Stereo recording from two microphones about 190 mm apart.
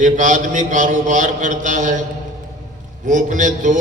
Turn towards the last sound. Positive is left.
turn(degrees=-40)  # may be behind; listen again after turning